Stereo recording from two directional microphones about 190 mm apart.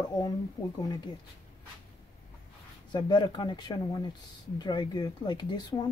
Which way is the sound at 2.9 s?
25° left (ahead or behind).